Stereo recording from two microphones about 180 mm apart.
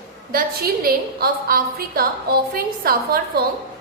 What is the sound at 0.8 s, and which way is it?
A woman's voice, 55° right (ahead or behind).